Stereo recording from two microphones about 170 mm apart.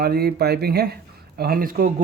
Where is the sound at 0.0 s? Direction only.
70° right (ahead or behind).